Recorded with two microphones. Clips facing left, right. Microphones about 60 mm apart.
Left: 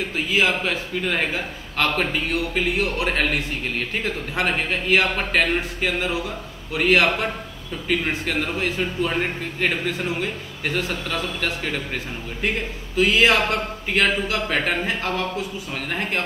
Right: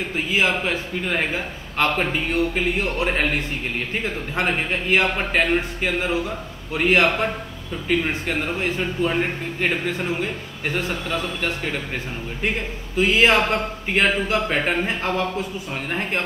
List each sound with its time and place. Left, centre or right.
0.1 s a man's voice: centre
8.3 s a man's voice: centre
12.9 s a man's voice: right
15.9 s a man's voice: right